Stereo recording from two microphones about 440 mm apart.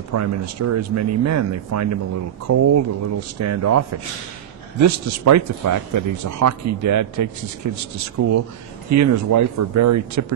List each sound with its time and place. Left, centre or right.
0.1 s speech: right